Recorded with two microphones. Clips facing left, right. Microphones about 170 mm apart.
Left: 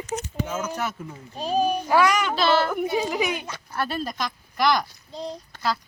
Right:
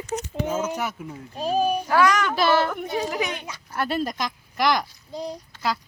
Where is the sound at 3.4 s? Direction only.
15° right (ahead or behind).